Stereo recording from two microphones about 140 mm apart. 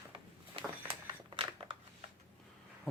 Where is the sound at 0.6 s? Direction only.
45° right (ahead or behind).